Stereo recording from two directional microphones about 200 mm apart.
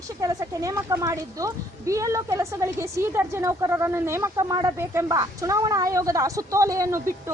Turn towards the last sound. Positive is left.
turn(degrees=-15)  # may be behind; listen again after turning